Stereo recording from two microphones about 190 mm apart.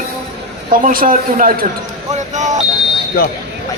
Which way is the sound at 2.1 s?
40° right (ahead or behind).